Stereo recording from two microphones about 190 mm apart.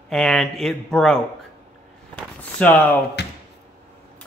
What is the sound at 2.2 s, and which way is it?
Speech, 5° left (ahead or behind).